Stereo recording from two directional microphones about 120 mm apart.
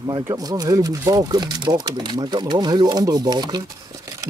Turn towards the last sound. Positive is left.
turn(degrees=-35)  # may be behind; listen again after turning